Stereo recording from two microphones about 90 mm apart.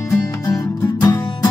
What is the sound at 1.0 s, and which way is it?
Music, 45° left (ahead or behind).